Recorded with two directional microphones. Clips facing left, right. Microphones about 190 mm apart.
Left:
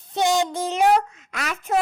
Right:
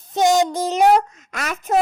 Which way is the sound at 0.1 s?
45° right (ahead or behind).